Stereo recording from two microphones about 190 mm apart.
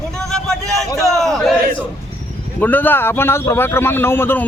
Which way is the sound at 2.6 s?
10° left (ahead or behind).